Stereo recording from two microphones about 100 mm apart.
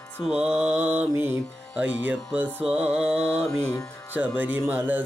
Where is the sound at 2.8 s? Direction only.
90° right.